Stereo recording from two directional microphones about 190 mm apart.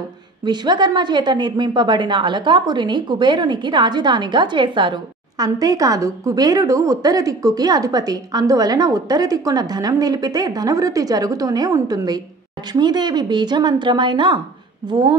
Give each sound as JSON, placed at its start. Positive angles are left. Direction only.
{"t": 0.5, "sound": "a woman's voice", "side_deg": -25}